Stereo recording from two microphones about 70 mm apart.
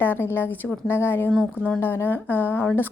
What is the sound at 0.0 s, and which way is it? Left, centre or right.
A woman's voice, left.